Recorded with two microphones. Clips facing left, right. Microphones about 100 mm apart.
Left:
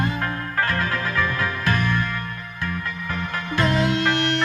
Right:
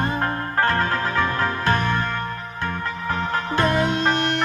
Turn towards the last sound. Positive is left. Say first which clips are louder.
# even
turn(degrees=-20)  # may be behind; listen again after turning